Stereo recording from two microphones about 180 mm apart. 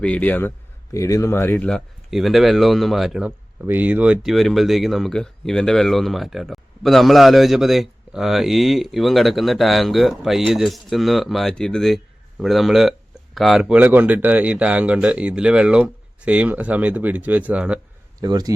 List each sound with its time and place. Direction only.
0.0 s speech: 10° left (ahead or behind)
18.2 s speech: 20° right (ahead or behind)